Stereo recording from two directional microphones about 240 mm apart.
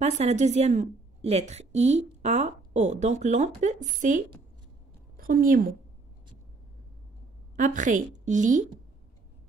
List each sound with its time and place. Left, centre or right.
0.0 s a woman's voice: right
7.5 s a woman's voice: right